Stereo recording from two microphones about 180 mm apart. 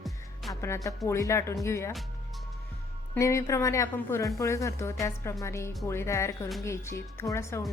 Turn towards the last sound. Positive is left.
turn(degrees=15)  # may be behind; listen again after turning